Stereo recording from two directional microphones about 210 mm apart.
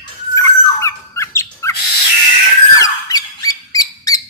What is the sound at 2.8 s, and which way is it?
Squeak, 15° left (ahead or behind).